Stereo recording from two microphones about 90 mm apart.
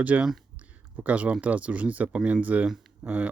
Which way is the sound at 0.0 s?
15° right (ahead or behind).